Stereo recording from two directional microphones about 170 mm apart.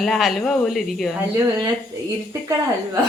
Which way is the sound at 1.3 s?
15° right (ahead or behind).